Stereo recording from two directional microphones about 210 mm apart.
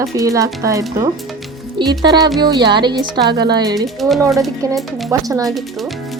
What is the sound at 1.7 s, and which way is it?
Speech, 20° right (ahead or behind).